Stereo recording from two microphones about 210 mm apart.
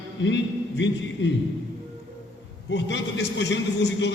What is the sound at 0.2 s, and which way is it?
A man's voice, 60° left (ahead or behind).